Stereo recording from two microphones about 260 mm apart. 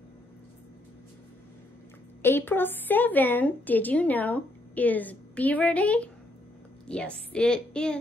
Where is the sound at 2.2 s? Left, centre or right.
Centre.